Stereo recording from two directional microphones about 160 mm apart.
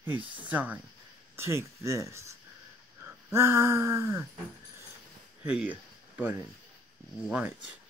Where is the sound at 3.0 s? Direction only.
15° right (ahead or behind).